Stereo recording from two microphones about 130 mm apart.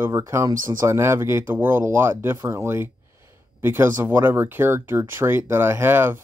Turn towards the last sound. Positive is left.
turn(degrees=-15)  # may be behind; listen again after turning